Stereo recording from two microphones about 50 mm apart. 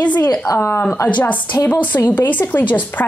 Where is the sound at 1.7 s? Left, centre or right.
Left.